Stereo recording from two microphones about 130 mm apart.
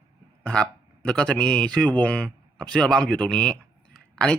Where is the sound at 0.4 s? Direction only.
5° left (ahead or behind).